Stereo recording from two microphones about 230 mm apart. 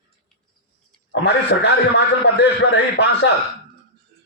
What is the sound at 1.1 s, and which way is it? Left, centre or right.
A man's voice, left.